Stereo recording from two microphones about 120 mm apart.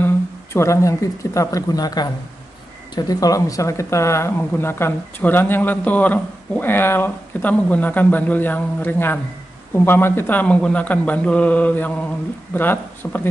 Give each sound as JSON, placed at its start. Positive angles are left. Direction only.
{"t": 0.0, "sound": "speech", "side_deg": 20}